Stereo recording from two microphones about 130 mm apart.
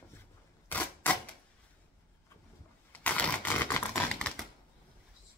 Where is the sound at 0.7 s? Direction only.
15° left (ahead or behind).